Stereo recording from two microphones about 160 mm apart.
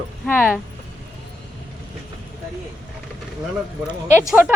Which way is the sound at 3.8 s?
10° right (ahead or behind).